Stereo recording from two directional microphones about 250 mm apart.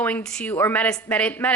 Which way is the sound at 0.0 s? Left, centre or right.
Centre.